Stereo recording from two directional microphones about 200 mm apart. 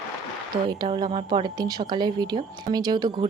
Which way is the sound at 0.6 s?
25° right (ahead or behind).